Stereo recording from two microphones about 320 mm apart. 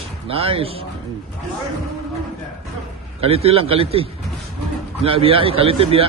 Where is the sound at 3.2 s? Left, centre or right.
Centre.